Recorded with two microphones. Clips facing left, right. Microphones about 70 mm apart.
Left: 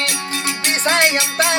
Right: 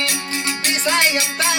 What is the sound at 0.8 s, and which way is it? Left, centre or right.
Music, left.